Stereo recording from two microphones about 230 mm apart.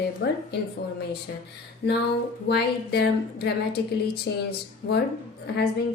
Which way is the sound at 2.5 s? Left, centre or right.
Left.